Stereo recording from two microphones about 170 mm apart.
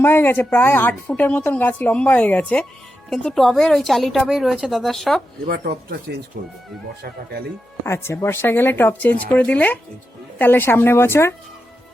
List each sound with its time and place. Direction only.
0.0 s a woman's voice: 15° left (ahead or behind)
5.5 s speech: 65° right (ahead or behind)
6.3 s speech: 55° right (ahead or behind)
7.9 s a woman's voice: 15° left (ahead or behind)